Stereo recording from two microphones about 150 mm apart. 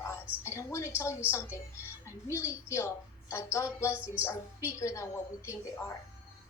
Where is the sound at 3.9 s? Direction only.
10° right (ahead or behind).